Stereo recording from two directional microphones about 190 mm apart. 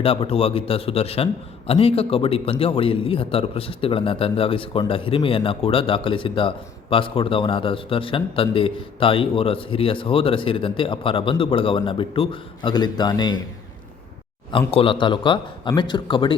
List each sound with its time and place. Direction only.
0.0 s a man's voice: 30° left (ahead or behind)
14.7 s a man's voice: 30° left (ahead or behind)